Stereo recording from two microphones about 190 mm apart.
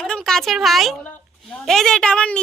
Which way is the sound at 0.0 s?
5° left (ahead or behind).